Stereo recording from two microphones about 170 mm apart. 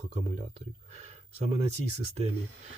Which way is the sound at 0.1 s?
40° right (ahead or behind).